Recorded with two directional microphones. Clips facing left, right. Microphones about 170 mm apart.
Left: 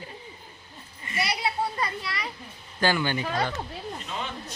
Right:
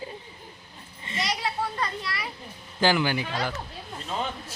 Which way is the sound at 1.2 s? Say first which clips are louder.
Left 1 dB; 10° left (ahead or behind).